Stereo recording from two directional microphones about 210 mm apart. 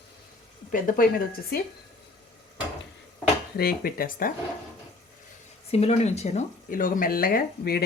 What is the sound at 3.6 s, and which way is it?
Speech, 45° left (ahead or behind).